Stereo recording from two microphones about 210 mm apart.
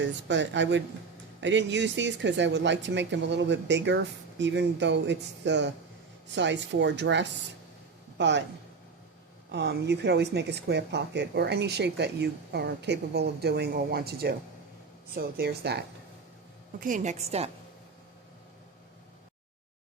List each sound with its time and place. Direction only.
0.0 s speech: 60° right (ahead or behind)
9.5 s speech: 55° right (ahead or behind)
16.8 s a woman's voice: 35° right (ahead or behind)